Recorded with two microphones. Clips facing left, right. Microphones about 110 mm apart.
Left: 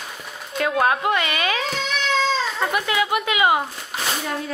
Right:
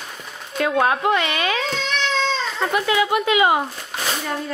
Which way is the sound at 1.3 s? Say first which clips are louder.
Right 1 dB; 5° left (ahead or behind).